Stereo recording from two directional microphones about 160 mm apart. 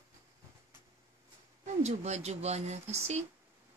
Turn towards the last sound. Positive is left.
turn(degrees=-45)  # may be behind; listen again after turning